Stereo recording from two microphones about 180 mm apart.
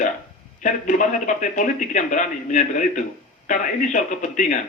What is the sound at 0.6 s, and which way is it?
A man's voice, 45° left (ahead or behind).